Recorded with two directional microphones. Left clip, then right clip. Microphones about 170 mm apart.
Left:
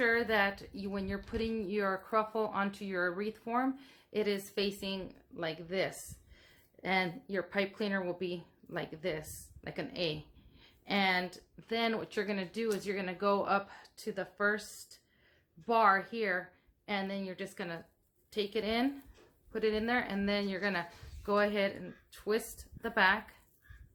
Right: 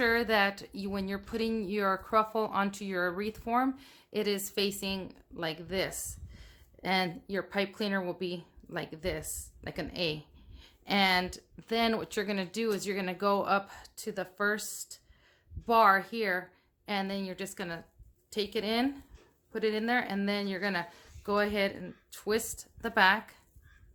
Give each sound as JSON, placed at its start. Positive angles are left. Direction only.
{"t": 0.0, "sound": "a woman's voice", "side_deg": -30}